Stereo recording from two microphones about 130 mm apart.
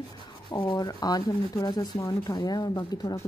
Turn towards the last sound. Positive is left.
turn(degrees=30)  # may be behind; listen again after turning